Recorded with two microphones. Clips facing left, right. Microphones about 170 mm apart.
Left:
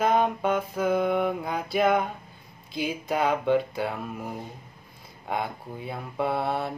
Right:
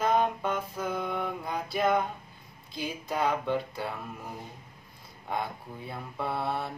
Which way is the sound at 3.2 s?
75° left (ahead or behind).